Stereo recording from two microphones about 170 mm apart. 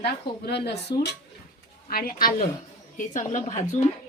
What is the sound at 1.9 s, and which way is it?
Speech, 60° left (ahead or behind).